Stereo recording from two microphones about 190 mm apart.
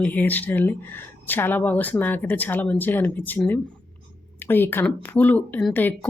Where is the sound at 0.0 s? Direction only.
10° left (ahead or behind).